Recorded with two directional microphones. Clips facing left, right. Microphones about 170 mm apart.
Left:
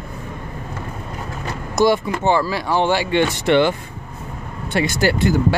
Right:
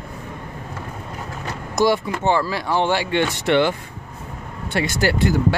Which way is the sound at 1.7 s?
20° left (ahead or behind).